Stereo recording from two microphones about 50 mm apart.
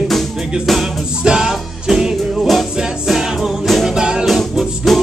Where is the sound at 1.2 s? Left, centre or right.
Centre.